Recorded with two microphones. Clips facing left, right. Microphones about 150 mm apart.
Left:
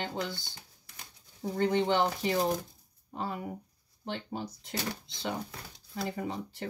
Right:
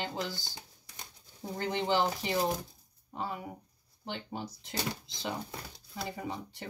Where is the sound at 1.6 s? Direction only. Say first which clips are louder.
Left 3 dB; centre (ahead or behind).